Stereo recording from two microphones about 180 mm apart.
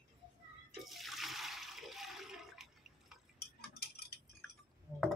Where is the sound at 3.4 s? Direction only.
60° left (ahead or behind).